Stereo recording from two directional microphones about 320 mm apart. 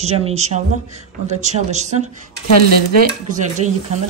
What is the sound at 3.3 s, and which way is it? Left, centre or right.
Speech, right.